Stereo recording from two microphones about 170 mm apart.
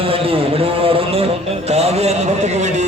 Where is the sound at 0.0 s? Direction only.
35° right (ahead or behind).